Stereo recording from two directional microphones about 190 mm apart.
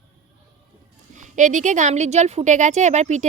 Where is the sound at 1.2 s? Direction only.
40° right (ahead or behind).